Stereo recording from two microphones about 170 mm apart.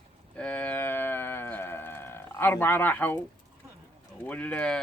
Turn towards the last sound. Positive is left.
turn(degrees=5)  # may be behind; listen again after turning